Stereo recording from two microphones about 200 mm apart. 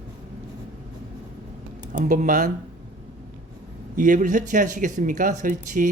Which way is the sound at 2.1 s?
40° right (ahead or behind).